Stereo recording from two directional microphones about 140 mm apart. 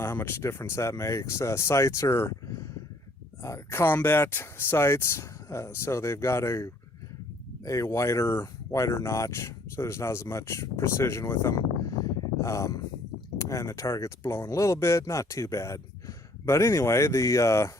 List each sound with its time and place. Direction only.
0.0 s speech: 15° left (ahead or behind)